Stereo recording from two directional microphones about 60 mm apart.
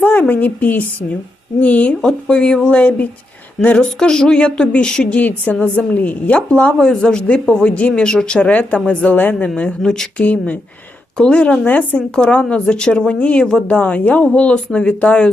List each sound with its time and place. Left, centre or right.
0.0 s a woman's voice: left
2.0 s a woman's voice: centre
9.1 s a woman's voice: left
9.6 s a woman's voice: centre
12.1 s a woman's voice: centre